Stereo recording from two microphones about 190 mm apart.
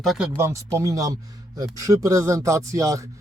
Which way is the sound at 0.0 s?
Centre (ahead or behind).